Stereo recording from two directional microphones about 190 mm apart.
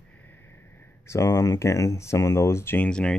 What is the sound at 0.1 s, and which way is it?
Speech, 10° left (ahead or behind).